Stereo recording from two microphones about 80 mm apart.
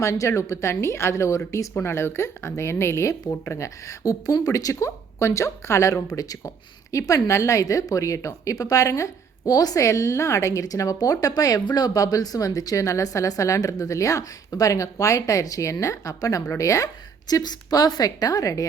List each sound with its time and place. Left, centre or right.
0.0 s a woman's voice: left
9.5 s a woman's voice: left